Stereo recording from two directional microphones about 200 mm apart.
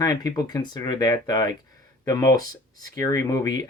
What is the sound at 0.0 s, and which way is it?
Speech, 20° left (ahead or behind).